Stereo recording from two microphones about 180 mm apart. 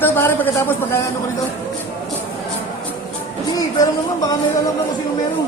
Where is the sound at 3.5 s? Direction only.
20° left (ahead or behind).